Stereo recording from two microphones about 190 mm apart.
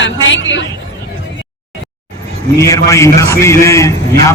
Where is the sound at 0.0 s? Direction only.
80° left.